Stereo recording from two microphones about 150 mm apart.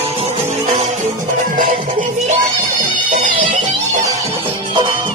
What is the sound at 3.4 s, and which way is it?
Music, 60° right (ahead or behind).